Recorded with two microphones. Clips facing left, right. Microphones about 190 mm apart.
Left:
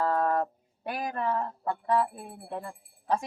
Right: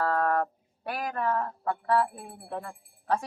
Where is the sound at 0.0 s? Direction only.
15° left (ahead or behind).